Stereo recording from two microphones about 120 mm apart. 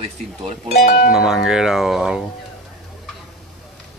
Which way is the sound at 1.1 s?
5° right (ahead or behind).